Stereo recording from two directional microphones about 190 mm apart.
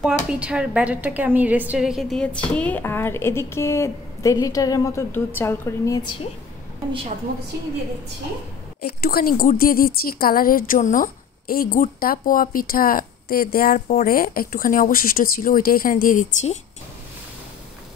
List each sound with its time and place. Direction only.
0.0 s a woman's voice: 5° right (ahead or behind); by 6.1 s 20° left (ahead or behind)
7.3 s a woman's voice: 55° right (ahead or behind)
8.8 s speech: 55° left (ahead or behind)